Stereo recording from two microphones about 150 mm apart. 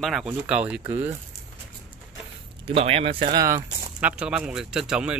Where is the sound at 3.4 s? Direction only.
20° right (ahead or behind).